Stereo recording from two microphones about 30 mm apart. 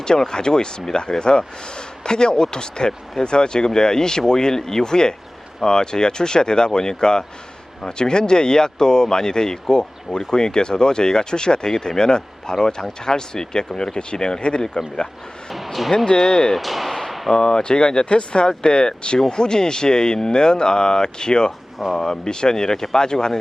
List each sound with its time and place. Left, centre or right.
0.3 s speech: left
15.5 s speech: centre
16.0 s speech: left
16.6 s speech: centre
17.3 s speech: left